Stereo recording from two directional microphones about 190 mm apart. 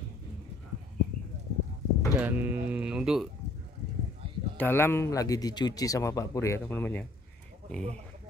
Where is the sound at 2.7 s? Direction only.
5° right (ahead or behind).